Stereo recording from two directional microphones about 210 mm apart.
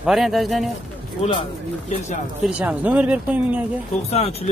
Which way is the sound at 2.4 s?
5° right (ahead or behind).